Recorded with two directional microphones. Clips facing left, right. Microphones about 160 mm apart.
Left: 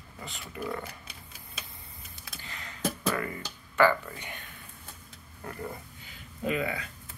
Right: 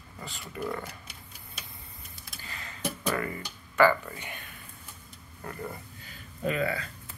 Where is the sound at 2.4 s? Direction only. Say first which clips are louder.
Right 1 dB; 20° left (ahead or behind).